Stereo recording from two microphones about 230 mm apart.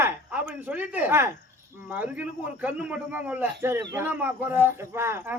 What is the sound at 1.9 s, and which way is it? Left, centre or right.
Speech, centre.